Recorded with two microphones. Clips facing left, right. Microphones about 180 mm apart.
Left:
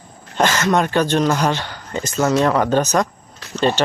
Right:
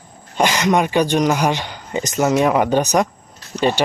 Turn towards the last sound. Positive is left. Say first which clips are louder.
# even
turn(degrees=-10)  # may be behind; listen again after turning